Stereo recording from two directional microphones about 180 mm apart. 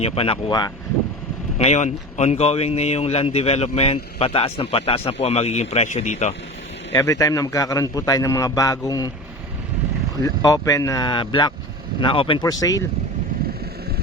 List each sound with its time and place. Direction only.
0.0 s speech: 35° left (ahead or behind)
1.5 s speech: 40° left (ahead or behind)
6.9 s a man's voice: 20° left (ahead or behind)
10.2 s a man's voice: 20° left (ahead or behind)